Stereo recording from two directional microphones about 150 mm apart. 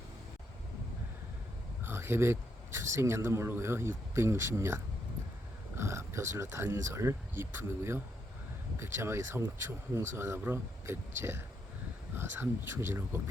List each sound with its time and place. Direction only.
1.8 s a man's voice: 15° right (ahead or behind)